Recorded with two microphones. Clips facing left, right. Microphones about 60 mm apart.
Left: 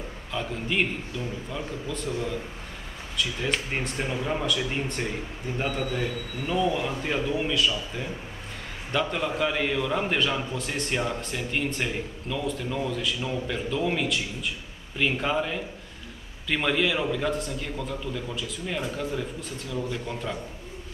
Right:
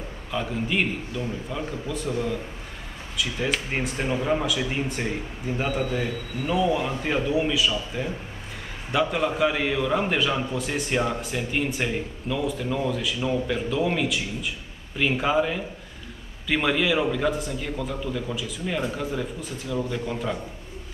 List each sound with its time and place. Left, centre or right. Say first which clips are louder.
0.3 s a man's voice: right 3 dB; centre